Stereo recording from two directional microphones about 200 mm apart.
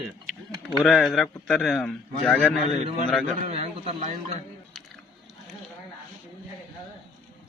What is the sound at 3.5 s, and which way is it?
Speech, 30° right (ahead or behind).